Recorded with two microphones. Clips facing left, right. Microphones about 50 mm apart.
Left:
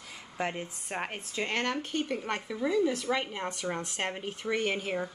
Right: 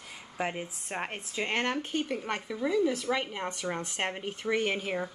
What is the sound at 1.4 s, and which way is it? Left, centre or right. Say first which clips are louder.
Speech: right 1 dB; right.